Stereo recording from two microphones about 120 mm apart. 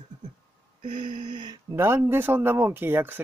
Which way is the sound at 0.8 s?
45° right (ahead or behind).